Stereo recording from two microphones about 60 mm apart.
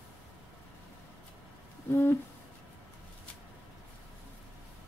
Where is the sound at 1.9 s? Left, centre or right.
Left.